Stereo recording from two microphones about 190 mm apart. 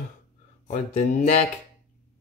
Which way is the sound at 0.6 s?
40° left (ahead or behind).